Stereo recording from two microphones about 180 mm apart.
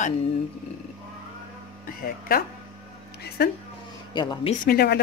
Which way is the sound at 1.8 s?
55° left (ahead or behind).